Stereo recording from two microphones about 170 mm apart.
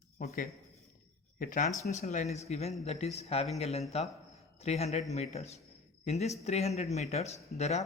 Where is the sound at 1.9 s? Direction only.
40° left (ahead or behind).